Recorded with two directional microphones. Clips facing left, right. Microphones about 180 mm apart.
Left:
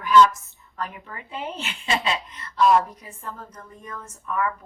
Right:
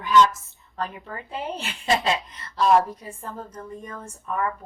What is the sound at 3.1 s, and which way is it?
Speech, 30° right (ahead or behind).